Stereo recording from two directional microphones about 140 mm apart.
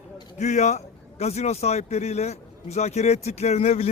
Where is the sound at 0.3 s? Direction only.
55° left (ahead or behind).